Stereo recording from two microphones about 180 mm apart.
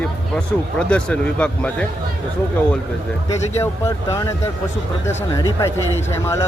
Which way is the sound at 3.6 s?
15° left (ahead or behind).